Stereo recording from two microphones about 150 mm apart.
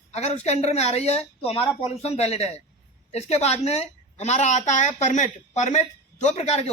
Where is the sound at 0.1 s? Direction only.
45° left (ahead or behind).